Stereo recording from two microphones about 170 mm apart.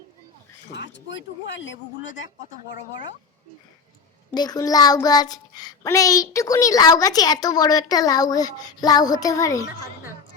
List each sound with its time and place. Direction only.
0.7 s speech: 90° left
4.3 s child singing: 25° left (ahead or behind)